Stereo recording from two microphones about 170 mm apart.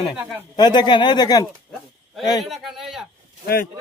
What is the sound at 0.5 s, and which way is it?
Speech, 25° left (ahead or behind).